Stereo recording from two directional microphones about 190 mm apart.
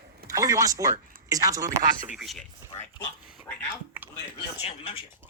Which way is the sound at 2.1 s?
Centre (ahead or behind).